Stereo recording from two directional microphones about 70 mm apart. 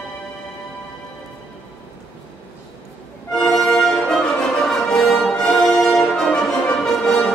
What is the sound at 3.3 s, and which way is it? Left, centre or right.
Music, centre.